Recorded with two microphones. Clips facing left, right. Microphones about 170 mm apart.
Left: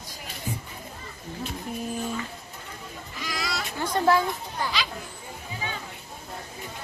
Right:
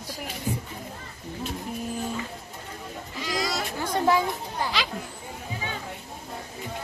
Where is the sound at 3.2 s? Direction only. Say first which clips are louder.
Right 4 dB; 35° right (ahead or behind).